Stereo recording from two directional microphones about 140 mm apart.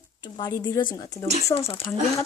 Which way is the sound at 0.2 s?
30° left (ahead or behind).